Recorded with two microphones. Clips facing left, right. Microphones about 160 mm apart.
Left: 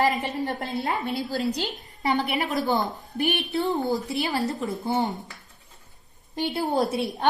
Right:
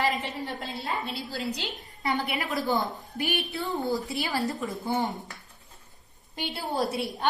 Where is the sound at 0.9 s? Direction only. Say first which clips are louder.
Left 4 dB; 50° left (ahead or behind).